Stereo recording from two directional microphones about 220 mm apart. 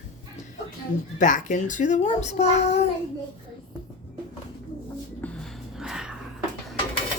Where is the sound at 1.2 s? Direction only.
35° left (ahead or behind).